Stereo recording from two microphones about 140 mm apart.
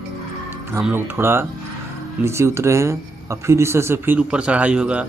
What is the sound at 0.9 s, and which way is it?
Speech, 15° right (ahead or behind).